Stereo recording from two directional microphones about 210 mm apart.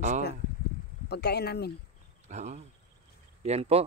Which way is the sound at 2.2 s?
35° right (ahead or behind).